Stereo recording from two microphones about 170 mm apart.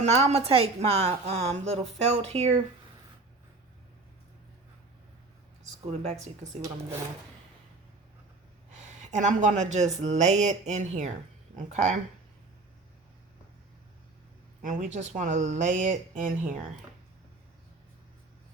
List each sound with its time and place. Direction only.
0.0 s a woman's voice: 40° right (ahead or behind)
5.8 s a woman's voice: 35° right (ahead or behind)
9.0 s speech: 45° right (ahead or behind)
14.6 s speech: 50° right (ahead or behind)